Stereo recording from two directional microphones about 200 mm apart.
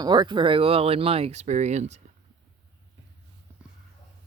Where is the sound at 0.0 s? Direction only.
20° right (ahead or behind).